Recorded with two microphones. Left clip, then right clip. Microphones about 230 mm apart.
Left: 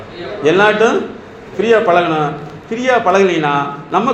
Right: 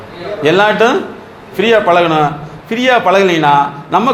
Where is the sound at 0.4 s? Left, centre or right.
Right.